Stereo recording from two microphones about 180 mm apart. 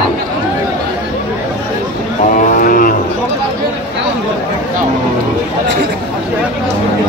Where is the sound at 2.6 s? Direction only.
50° left (ahead or behind).